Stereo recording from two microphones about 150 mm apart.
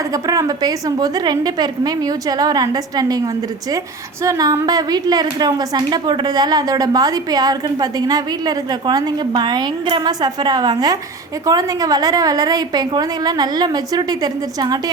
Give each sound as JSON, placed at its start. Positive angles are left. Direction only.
{"t": 0.1, "sound": "a woman's voice", "side_deg": -25}